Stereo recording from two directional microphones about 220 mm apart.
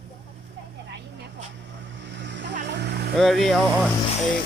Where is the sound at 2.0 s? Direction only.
55° right (ahead or behind).